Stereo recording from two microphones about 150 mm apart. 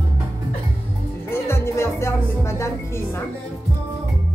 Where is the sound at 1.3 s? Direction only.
15° left (ahead or behind).